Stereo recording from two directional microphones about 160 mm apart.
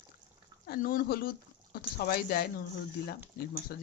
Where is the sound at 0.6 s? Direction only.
70° left (ahead or behind).